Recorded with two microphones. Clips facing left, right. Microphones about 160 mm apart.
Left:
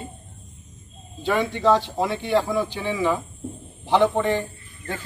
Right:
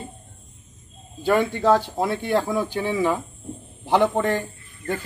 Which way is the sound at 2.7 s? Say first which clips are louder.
Right 3 dB; 45° right (ahead or behind).